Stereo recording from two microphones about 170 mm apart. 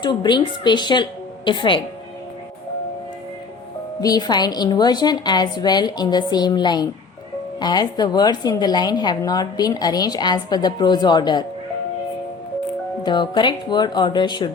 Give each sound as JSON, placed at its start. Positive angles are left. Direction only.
{"t": 0.0, "sound": "a woman's voice", "side_deg": 25}
{"t": 4.0, "sound": "a woman's voice", "side_deg": 25}
{"t": 13.0, "sound": "a woman's voice", "side_deg": 25}